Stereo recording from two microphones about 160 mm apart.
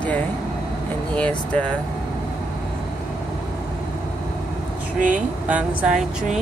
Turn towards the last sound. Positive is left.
turn(degrees=-5)  # may be behind; listen again after turning